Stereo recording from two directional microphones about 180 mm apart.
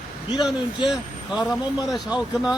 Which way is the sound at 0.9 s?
Centre (ahead or behind).